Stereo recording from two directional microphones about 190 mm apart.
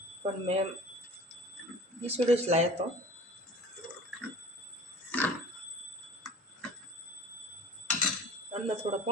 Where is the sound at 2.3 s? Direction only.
35° right (ahead or behind).